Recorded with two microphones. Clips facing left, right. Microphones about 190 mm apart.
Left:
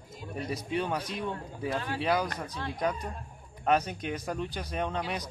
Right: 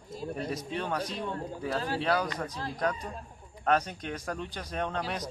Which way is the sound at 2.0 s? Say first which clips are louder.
Left 3 dB; 10° left (ahead or behind).